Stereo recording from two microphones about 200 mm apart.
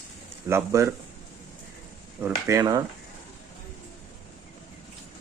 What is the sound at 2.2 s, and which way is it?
Speech, 15° right (ahead or behind).